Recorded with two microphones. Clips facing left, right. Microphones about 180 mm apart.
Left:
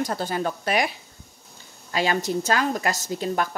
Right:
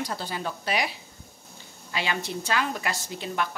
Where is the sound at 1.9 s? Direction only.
40° left (ahead or behind).